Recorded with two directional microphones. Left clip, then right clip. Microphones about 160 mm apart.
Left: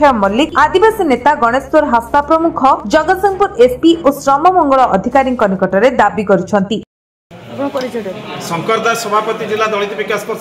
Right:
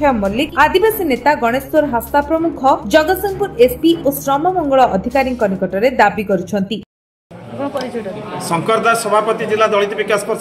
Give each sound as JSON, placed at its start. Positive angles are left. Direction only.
{"t": 0.0, "sound": "a woman's voice", "side_deg": 5}
{"t": 8.5, "sound": "speech", "side_deg": -25}